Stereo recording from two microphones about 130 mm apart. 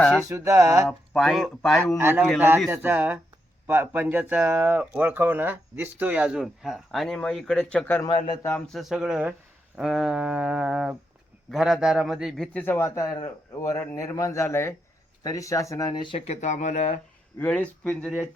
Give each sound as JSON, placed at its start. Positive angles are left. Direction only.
{"t": 0.0, "sound": "a man's voice", "side_deg": 5}
{"t": 0.3, "sound": "a sound", "side_deg": -20}
{"t": 0.9, "sound": "a man's voice", "side_deg": 0}
{"t": 2.0, "sound": "a man's voice", "side_deg": -15}
{"t": 12.6, "sound": "speech", "side_deg": 20}
{"t": 15.9, "sound": "speech", "side_deg": 35}
{"t": 16.1, "sound": "speech", "side_deg": 55}
{"t": 17.3, "sound": "speech", "side_deg": 10}